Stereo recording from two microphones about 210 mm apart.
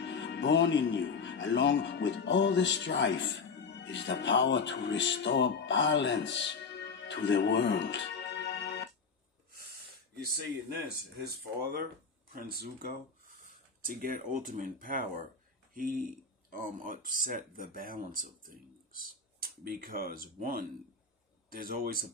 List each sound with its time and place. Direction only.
0.0 s speech: 55° left (ahead or behind)
12.4 s a man's voice: 45° right (ahead or behind)